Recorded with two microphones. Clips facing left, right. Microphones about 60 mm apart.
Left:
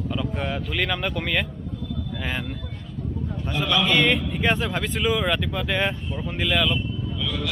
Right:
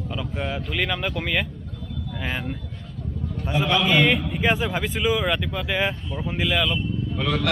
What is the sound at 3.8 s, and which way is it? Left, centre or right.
A man's voice, centre.